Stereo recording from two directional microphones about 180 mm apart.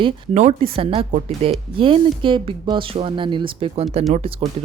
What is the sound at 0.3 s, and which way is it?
Speech, 35° right (ahead or behind).